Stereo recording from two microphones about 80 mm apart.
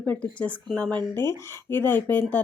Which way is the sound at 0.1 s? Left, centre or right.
Centre.